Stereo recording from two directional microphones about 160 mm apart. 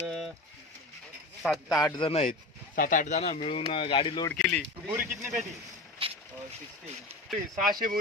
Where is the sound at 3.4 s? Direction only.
35° left (ahead or behind).